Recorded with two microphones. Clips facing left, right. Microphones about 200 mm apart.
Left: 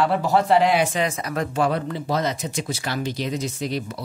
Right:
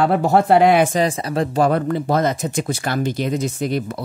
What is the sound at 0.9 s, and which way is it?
Speech, 30° right (ahead or behind).